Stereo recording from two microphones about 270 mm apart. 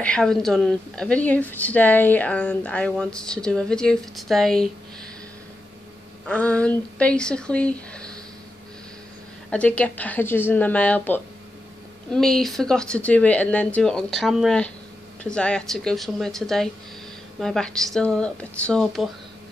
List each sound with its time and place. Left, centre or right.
0.0 s speech: centre
6.2 s speech: centre
9.5 s speech: centre